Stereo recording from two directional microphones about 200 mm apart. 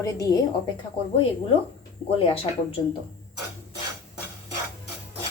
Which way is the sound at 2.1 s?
25° left (ahead or behind).